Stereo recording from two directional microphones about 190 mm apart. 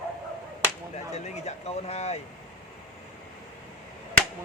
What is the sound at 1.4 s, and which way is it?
Speech, 35° left (ahead or behind).